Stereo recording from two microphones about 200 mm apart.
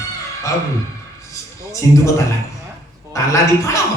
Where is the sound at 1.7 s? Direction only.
15° left (ahead or behind).